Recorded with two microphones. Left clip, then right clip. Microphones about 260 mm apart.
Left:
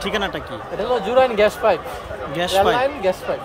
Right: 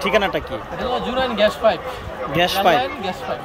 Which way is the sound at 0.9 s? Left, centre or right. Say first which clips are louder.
Left 4 dB; left.